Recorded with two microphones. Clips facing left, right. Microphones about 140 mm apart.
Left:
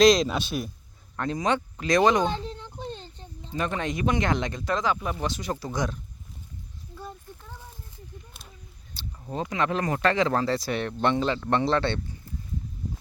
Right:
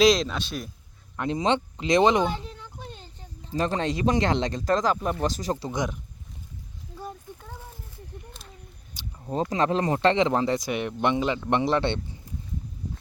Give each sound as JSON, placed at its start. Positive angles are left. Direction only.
{"t": 0.0, "sound": "speech", "side_deg": -5}
{"t": 0.3, "sound": "speech", "side_deg": 10}
{"t": 1.3, "sound": "speech", "side_deg": -25}
{"t": 2.5, "sound": "a sound", "side_deg": 20}
{"t": 3.5, "sound": "speech", "side_deg": -35}
{"t": 8.9, "sound": "a sound", "side_deg": -15}
{"t": 9.5, "sound": "speech", "side_deg": -30}